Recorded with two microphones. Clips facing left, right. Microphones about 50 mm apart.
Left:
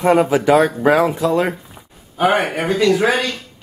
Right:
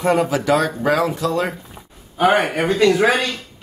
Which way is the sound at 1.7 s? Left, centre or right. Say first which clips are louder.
Right 1 dB; centre.